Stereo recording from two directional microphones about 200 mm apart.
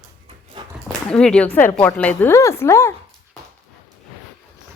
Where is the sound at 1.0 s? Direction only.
5° left (ahead or behind).